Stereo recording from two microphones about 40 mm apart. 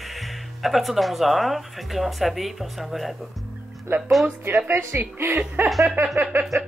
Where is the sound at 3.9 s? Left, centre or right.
Right.